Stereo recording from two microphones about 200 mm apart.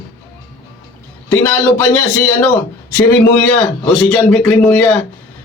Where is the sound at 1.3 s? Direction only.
10° left (ahead or behind).